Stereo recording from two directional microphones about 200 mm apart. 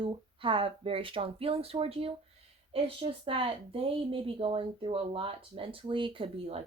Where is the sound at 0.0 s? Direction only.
25° right (ahead or behind).